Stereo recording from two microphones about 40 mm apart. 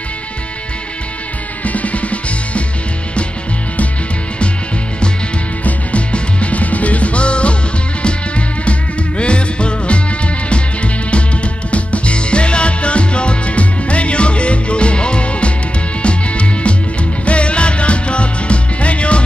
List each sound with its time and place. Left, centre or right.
1.6 s music: left
5.6 s music: left